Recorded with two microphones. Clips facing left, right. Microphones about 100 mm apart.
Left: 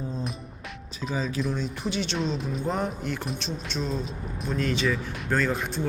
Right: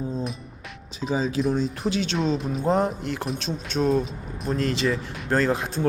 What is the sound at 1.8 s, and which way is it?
Speech, centre (ahead or behind).